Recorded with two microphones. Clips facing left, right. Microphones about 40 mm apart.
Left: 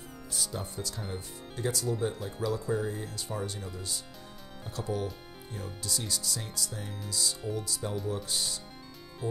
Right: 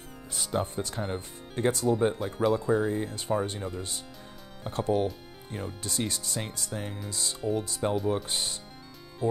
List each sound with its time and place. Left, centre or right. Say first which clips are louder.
0.3 s speech: right 7 dB; right
9.2 s music: right 7 dB; centre